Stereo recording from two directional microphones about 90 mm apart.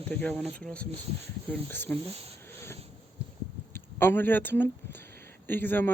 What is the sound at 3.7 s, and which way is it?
Speech, 25° left (ahead or behind).